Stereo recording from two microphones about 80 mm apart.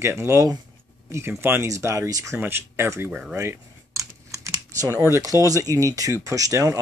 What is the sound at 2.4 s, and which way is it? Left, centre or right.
Speech, right.